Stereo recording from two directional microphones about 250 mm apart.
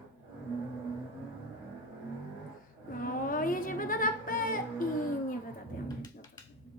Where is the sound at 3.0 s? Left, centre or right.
Left.